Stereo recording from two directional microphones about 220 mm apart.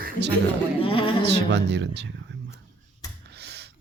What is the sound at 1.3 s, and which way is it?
Speech, 50° right (ahead or behind).